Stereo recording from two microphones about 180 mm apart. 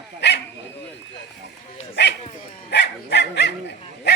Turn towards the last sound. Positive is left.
turn(degrees=70)  # may be behind; listen again after turning